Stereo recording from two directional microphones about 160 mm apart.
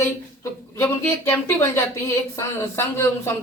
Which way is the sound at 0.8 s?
15° left (ahead or behind).